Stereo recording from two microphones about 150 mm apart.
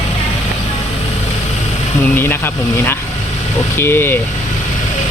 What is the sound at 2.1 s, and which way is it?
Speech, 15° left (ahead or behind).